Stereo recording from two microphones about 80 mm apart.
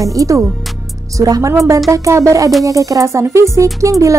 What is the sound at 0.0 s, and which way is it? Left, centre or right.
Speech, right.